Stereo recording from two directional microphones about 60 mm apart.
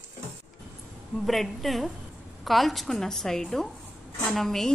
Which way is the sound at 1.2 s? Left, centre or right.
Centre.